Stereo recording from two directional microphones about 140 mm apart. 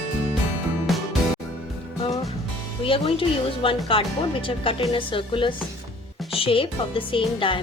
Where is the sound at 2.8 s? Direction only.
40° left (ahead or behind).